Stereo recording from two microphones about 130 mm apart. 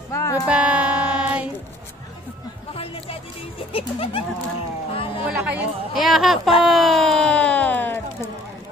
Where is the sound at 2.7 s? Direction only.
45° left (ahead or behind).